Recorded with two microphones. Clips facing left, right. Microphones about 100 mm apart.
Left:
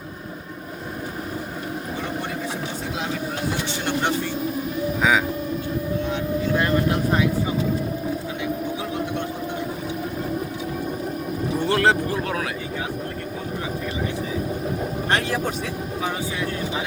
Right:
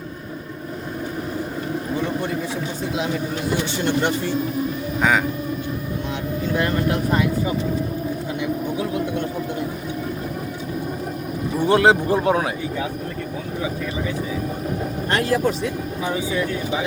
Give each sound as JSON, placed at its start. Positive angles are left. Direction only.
{"t": 11.6, "sound": "speech", "side_deg": -15}